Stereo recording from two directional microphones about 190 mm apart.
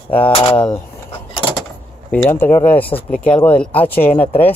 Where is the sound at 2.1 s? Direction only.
10° left (ahead or behind).